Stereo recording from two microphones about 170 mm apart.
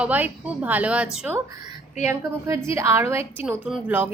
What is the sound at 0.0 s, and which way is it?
A woman's voice, 10° right (ahead or behind).